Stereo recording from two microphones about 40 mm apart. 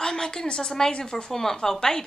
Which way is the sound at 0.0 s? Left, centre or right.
Centre.